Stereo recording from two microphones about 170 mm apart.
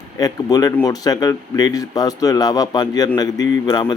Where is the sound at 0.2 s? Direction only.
20° left (ahead or behind).